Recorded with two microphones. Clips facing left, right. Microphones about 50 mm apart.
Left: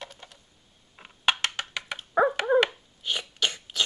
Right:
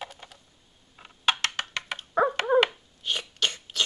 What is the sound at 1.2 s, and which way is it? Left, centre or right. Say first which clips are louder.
Music: even; centre.